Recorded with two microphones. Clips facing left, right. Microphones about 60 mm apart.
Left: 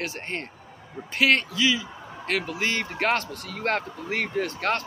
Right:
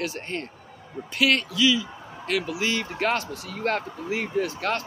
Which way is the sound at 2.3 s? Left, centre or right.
Left.